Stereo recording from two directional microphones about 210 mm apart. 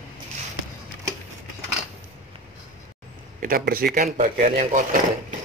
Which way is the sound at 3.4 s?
45° right (ahead or behind).